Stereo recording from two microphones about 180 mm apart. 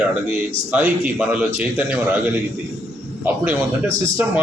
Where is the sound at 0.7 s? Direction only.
10° right (ahead or behind).